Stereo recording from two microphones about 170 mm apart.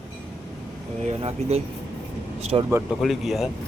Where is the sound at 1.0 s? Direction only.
40° right (ahead or behind).